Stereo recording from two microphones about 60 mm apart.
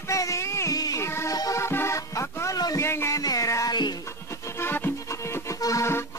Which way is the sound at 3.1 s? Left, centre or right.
Left.